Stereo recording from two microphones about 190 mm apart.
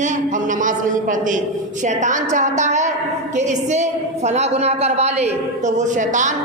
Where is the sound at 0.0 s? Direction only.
40° right (ahead or behind).